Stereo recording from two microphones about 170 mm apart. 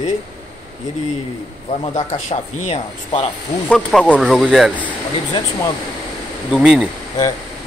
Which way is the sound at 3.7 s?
5° left (ahead or behind).